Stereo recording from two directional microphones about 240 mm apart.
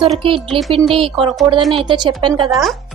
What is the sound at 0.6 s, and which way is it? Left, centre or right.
Speech, centre.